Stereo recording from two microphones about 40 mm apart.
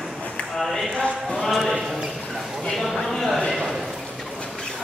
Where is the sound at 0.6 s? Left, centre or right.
Centre.